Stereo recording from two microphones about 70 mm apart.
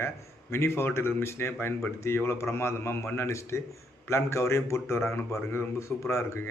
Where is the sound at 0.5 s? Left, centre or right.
Left.